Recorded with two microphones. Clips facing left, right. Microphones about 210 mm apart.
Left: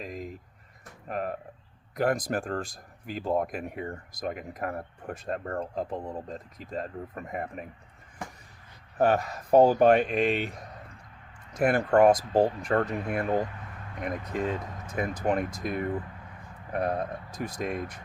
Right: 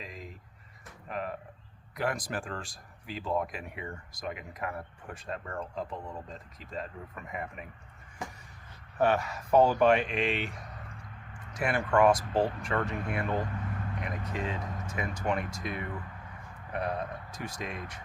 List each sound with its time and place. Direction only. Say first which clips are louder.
0.0 s a sound: left 7 dB; 45° left (ahead or behind)
2.0 s speech: left 6 dB; 50° left (ahead or behind)
9.0 s speech: left 3 dB; 40° left (ahead or behind)
11.5 s speech: left 5 dB; 40° left (ahead or behind)